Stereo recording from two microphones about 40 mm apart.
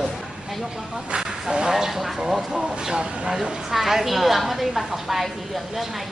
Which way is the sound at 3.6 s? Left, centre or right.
Centre.